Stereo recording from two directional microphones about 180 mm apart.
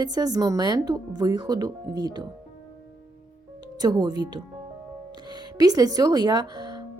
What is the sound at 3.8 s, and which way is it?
Speech, 25° right (ahead or behind).